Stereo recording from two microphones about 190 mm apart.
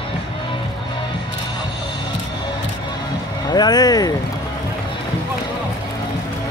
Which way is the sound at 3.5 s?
20° left (ahead or behind).